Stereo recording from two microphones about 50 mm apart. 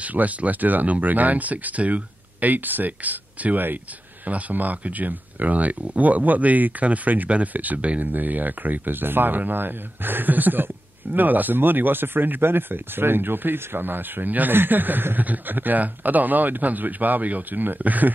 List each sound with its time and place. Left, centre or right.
0.0 s speech: right